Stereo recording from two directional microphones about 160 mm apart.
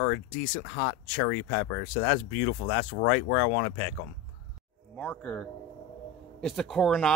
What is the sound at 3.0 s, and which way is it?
Speech, 90° left.